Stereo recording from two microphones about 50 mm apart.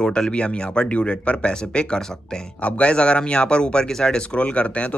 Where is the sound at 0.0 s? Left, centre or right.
Centre.